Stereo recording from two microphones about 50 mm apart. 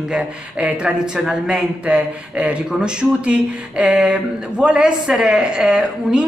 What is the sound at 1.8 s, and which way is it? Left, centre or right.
Speech, right.